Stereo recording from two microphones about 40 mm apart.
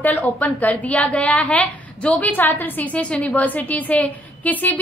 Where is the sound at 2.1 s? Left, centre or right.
Left.